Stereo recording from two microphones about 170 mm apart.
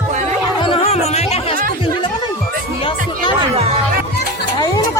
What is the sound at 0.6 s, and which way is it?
Music, 35° left (ahead or behind).